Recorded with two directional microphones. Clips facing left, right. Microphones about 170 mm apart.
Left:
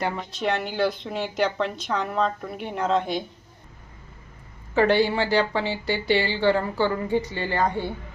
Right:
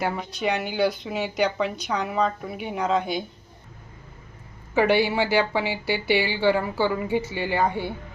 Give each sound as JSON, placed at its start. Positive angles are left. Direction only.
{"t": 0.0, "sound": "speech", "side_deg": 0}
{"t": 4.7, "sound": "speech", "side_deg": -10}